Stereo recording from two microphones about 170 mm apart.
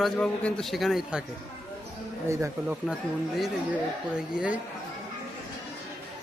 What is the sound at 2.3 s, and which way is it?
Speech, 15° right (ahead or behind).